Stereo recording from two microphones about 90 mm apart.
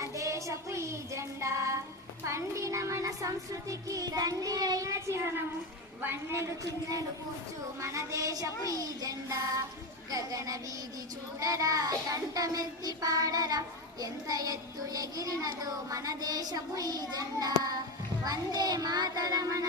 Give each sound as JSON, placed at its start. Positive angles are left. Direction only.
{"t": 0.0, "sound": "music", "side_deg": -35}
{"t": 2.2, "sound": "child singing", "side_deg": -35}
{"t": 6.0, "sound": "a man's voice", "side_deg": -25}
{"t": 7.8, "sound": "child singing", "side_deg": -35}